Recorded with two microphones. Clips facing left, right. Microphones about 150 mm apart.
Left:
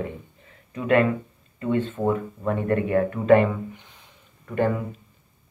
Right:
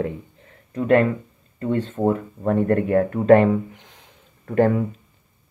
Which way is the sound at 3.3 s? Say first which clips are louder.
Right 4 dB; 75° right (ahead or behind).